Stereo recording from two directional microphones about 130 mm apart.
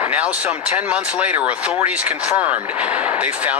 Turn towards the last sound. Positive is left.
turn(degrees=-10)  # may be behind; listen again after turning